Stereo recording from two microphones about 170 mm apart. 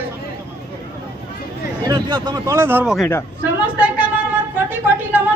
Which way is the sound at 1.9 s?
25° right (ahead or behind).